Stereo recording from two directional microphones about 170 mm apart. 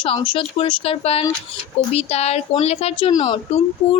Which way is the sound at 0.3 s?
30° left (ahead or behind).